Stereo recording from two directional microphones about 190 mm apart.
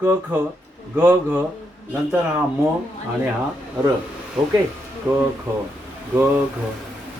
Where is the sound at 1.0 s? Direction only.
10° right (ahead or behind).